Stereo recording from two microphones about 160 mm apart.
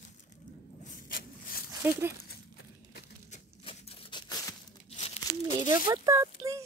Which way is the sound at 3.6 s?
35° left (ahead or behind).